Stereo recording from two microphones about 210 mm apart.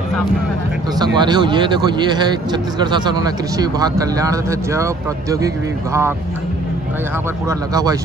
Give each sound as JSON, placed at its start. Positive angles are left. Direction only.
{"t": 0.9, "sound": "speech", "side_deg": -20}
{"t": 7.4, "sound": "speech", "side_deg": -15}